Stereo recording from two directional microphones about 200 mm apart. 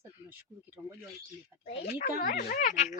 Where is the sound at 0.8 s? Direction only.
10° right (ahead or behind).